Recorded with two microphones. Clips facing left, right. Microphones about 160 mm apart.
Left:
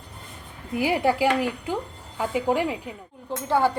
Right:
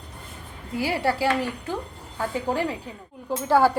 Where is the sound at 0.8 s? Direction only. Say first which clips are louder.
Left 2 dB; 20° left (ahead or behind).